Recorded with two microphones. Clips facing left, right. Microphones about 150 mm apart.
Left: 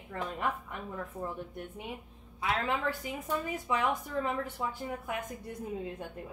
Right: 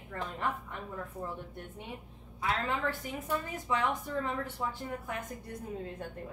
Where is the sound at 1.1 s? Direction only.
25° left (ahead or behind).